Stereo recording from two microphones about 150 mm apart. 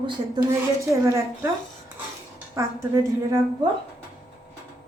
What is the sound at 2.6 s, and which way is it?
Speech, 20° right (ahead or behind).